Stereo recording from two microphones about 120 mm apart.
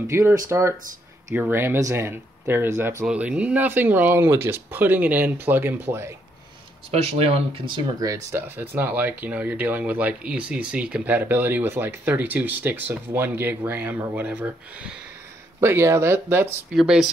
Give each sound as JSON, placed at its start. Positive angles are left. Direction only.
{"t": 0.0, "sound": "speech", "side_deg": -20}
{"t": 3.1, "sound": "speech", "side_deg": -10}
{"t": 6.9, "sound": "speech", "side_deg": -60}
{"t": 8.0, "sound": "speech", "side_deg": -25}
{"t": 16.7, "sound": "speech", "side_deg": -5}